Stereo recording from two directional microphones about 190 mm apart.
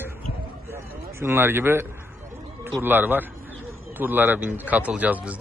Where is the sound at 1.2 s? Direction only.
10° right (ahead or behind).